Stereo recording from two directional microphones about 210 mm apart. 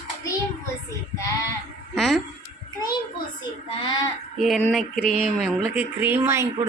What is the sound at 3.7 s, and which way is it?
Speech, 20° left (ahead or behind).